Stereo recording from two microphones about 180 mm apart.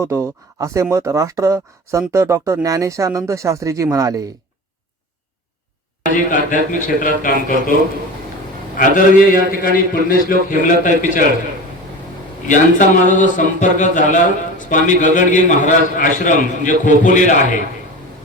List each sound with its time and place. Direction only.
0.0 s speech: 15° right (ahead or behind)
6.1 s a man's voice: 45° left (ahead or behind)
8.8 s a man's voice: 50° left (ahead or behind)
12.5 s a man's voice: 45° left (ahead or behind)